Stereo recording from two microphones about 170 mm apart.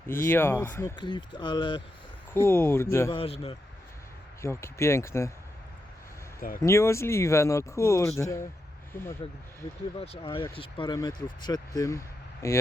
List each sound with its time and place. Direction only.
0.1 s speech: 15° left (ahead or behind)
0.9 s speech: 25° left (ahead or behind)
2.3 s speech: 15° left (ahead or behind)
3.2 s speech: 35° left (ahead or behind)
4.4 s speech: 15° left (ahead or behind)
6.6 s speech: 15° left (ahead or behind)
10.0 s speech: 35° left (ahead or behind); by 12.5 s 20° left (ahead or behind)